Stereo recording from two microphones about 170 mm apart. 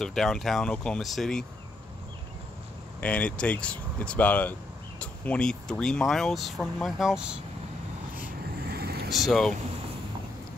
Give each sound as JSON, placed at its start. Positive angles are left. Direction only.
{"t": 0.0, "sound": "speech", "side_deg": 5}
{"t": 3.0, "sound": "speech", "side_deg": 5}
{"t": 8.6, "sound": "vehicle", "side_deg": -70}
{"t": 9.1, "sound": "speech", "side_deg": 0}